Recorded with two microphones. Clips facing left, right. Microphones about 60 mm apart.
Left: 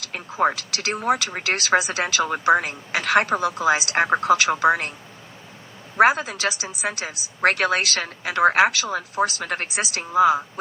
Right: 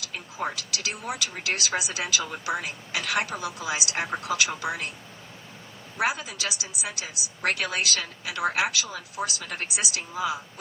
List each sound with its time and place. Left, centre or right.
0.0 s speech: left
6.0 s speech: left